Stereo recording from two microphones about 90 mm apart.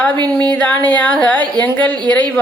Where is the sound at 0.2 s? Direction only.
50° right (ahead or behind).